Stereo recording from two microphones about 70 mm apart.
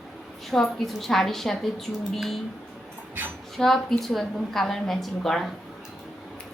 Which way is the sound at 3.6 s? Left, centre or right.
Centre.